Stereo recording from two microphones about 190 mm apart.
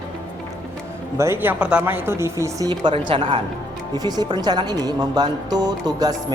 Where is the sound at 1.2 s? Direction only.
10° right (ahead or behind).